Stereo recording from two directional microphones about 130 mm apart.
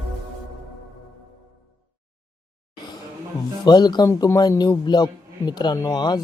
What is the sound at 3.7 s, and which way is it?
Speech, 30° left (ahead or behind).